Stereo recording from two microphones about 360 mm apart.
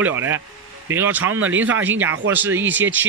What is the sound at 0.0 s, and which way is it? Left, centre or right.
A man's voice, centre.